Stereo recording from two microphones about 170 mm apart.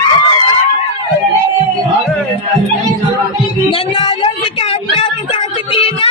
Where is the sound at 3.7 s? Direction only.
30° left (ahead or behind).